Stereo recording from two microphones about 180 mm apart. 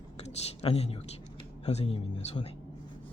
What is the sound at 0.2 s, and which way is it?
A woman's voice, 35° left (ahead or behind).